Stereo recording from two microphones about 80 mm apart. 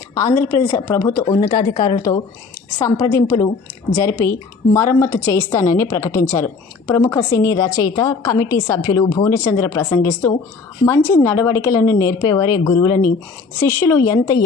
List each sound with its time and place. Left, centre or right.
0.1 s a woman's voice: left
2.0 s a woman's voice: left
2.8 s a woman's voice: left
6.2 s speech: left
6.8 s a woman's voice: left
9.1 s a woman's voice: left
10.0 s a woman's voice: left
12.2 s speech: left
13.7 s a woman's voice: left